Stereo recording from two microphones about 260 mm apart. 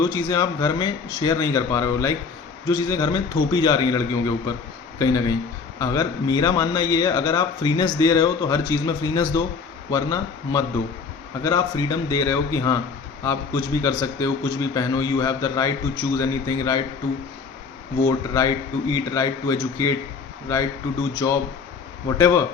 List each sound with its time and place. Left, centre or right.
0.0 s a man's voice: centre
18.3 s a man's voice: centre
21.2 s a man's voice: centre